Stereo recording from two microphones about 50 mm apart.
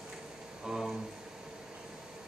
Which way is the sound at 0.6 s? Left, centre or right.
Centre.